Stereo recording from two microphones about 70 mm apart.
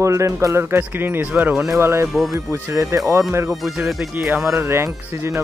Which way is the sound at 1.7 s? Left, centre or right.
Right.